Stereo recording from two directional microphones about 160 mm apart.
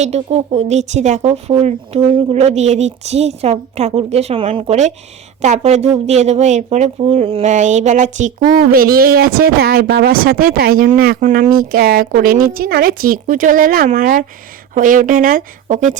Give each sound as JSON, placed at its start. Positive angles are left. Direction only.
{"t": 0.0, "sound": "speech", "side_deg": -40}
{"t": 7.5, "sound": "speech", "side_deg": -50}